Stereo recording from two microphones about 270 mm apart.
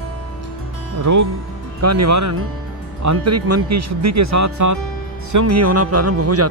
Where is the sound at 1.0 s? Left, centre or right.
Right.